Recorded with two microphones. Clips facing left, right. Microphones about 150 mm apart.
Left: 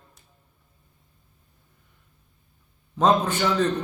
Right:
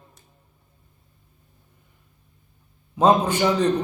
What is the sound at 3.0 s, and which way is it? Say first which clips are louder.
Speech: right 3 dB; 10° right (ahead or behind).